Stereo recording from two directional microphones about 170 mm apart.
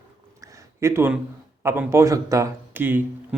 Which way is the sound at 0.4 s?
15° right (ahead or behind).